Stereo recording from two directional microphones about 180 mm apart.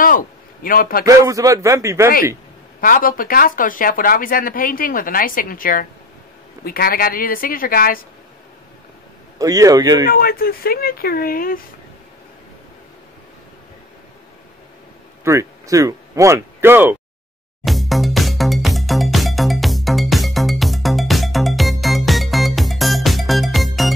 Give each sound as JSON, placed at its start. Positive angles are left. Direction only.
{"t": 0.7, "sound": "speech", "side_deg": 55}
{"t": 1.0, "sound": "a man's voice", "side_deg": -20}
{"t": 2.8, "sound": "speech", "side_deg": 50}
{"t": 9.4, "sound": "speech", "side_deg": -20}
{"t": 10.0, "sound": "speech", "side_deg": 55}
{"t": 15.2, "sound": "speech", "side_deg": -15}
{"t": 17.6, "sound": "music", "side_deg": 0}